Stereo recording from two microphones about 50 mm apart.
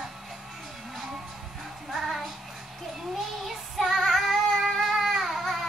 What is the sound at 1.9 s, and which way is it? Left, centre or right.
Child singing, centre.